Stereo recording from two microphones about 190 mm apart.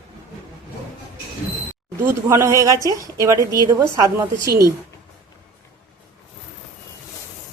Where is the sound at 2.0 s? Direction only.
15° right (ahead or behind).